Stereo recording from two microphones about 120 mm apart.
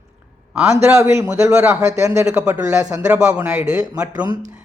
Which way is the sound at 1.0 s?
20° right (ahead or behind).